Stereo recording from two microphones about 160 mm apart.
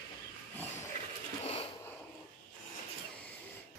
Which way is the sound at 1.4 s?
40° left (ahead or behind).